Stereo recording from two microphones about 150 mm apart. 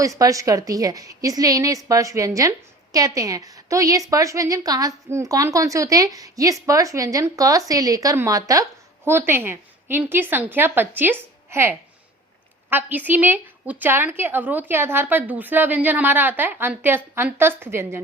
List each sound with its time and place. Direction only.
0.0 s a woman's voice: 20° right (ahead or behind)